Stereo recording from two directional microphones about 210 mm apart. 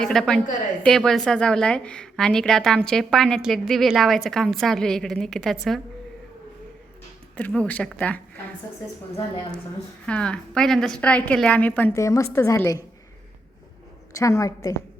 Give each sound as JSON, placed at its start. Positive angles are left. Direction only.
{"t": 0.0, "sound": "a woman's voice", "side_deg": 5}
{"t": 7.3, "sound": "a woman's voice", "side_deg": 5}
{"t": 10.1, "sound": "a woman's voice", "side_deg": 5}
{"t": 14.1, "sound": "a woman's voice", "side_deg": 15}